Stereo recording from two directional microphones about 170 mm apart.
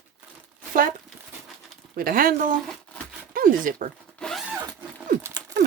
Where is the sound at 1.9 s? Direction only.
55° right (ahead or behind).